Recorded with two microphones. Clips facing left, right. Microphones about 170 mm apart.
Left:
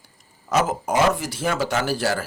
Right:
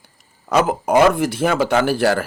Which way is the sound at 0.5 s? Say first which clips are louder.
Right 5 dB; 60° right (ahead or behind).